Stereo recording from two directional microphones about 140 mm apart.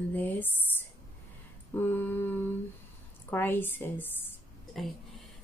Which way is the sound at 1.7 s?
15° left (ahead or behind).